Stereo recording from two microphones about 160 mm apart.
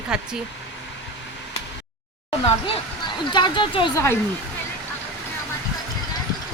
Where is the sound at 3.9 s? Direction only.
15° left (ahead or behind).